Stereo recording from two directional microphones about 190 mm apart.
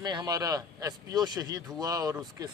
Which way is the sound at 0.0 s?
20° right (ahead or behind).